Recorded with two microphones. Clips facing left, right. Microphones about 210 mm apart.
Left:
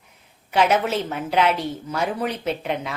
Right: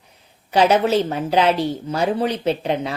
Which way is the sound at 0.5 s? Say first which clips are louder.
Right 4 dB; 35° right (ahead or behind).